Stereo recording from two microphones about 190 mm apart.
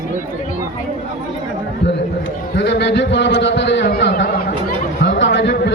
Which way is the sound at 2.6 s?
65° left (ahead or behind).